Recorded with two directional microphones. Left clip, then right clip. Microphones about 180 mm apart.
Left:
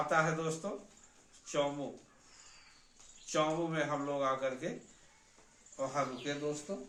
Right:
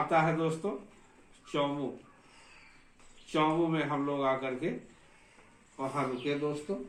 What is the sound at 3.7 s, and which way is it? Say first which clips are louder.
Speech: right 3 dB; 15° left (ahead or behind).